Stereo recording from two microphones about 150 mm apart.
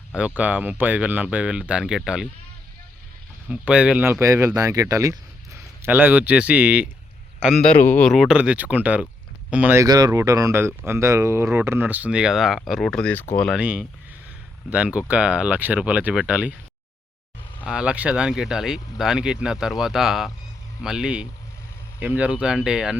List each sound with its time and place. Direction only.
0.3 s speech: 10° right (ahead or behind)
3.5 s speech: 5° right (ahead or behind)
7.3 s a man's voice: 5° left (ahead or behind)
9.8 s speech: 25° right (ahead or behind); by 13.6 s 5° left (ahead or behind)
13.6 s speech: 10° right (ahead or behind)
17.7 s speech: 5° right (ahead or behind)